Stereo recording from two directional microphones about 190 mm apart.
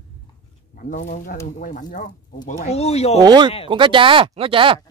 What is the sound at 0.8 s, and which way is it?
Speech, 40° left (ahead or behind).